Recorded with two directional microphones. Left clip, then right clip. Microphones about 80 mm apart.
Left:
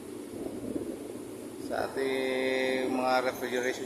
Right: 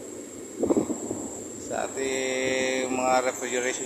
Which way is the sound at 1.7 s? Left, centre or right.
Left.